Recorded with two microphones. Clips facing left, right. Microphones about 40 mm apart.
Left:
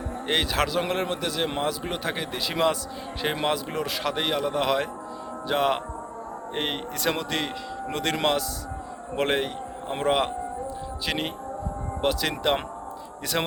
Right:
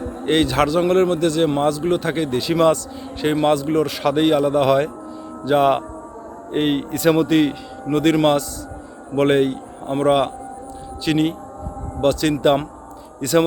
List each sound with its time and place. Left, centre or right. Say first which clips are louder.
0.3 s a man's voice: right 8 dB; centre